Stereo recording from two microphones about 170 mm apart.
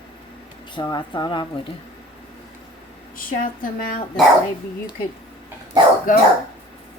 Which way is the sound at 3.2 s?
55° left (ahead or behind).